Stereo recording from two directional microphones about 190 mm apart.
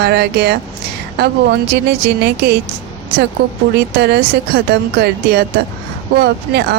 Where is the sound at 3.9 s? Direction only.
60° right (ahead or behind).